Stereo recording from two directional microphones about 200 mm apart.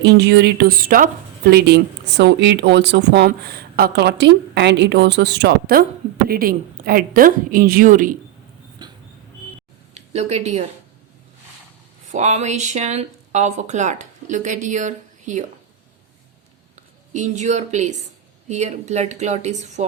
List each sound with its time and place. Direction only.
0.0 s a woman's voice: 55° right (ahead or behind)
8.8 s a sound: 20° right (ahead or behind)
10.1 s speech: 35° right (ahead or behind)
12.1 s speech: 35° right (ahead or behind)
17.1 s speech: 35° right (ahead or behind)